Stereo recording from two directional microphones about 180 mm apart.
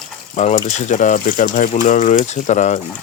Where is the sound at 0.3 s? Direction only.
40° left (ahead or behind).